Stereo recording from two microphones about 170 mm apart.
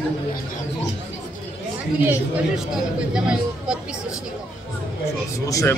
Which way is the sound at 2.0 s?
10° right (ahead or behind).